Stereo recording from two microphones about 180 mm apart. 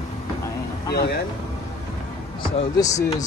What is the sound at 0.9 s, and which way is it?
Speech, 65° left (ahead or behind).